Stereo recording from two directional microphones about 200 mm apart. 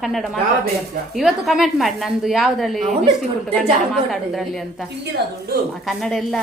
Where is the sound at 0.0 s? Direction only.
Centre (ahead or behind).